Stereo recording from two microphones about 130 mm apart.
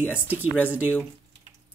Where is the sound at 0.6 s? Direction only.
10° right (ahead or behind).